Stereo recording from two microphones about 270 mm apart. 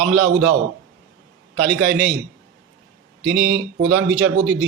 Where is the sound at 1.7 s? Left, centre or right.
Right.